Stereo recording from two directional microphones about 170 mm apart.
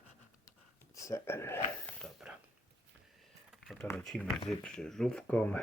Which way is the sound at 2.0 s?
Centre (ahead or behind).